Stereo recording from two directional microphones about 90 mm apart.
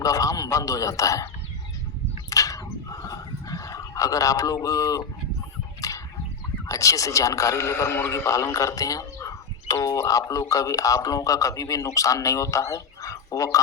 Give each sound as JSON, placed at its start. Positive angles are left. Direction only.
{"t": 0.0, "sound": "a man's voice", "side_deg": 40}
{"t": 2.3, "sound": "a sound", "side_deg": 40}
{"t": 6.7, "sound": "a man's voice", "side_deg": 40}